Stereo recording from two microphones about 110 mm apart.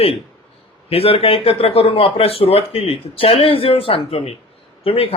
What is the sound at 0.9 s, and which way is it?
Speech, 60° left (ahead or behind).